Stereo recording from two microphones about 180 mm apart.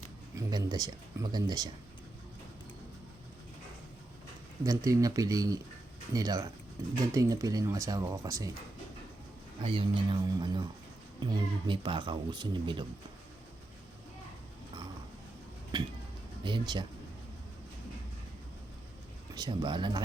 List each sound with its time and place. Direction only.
0.3 s speech: 20° right (ahead or behind)
4.6 s speech: 20° right (ahead or behind)
9.6 s speech: 30° right (ahead or behind)
15.7 s music: 25° right (ahead or behind)
16.4 s speech: 25° right (ahead or behind)
19.3 s speech: 25° right (ahead or behind)